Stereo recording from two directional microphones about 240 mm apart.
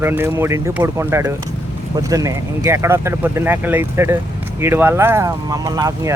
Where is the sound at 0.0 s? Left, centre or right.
Centre.